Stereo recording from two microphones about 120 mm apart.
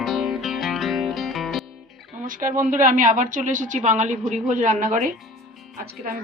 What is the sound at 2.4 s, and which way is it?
A woman's voice, 90° right.